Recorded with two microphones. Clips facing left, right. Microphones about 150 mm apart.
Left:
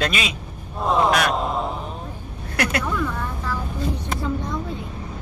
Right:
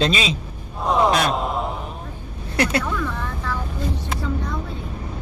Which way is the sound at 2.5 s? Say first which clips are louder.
Right 3 dB; 30° right (ahead or behind).